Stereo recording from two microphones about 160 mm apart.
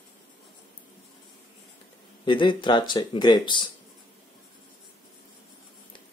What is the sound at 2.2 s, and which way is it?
Speech, 30° left (ahead or behind).